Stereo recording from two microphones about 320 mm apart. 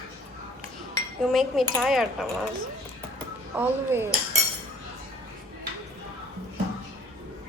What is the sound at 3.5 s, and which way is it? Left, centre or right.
Speech, centre.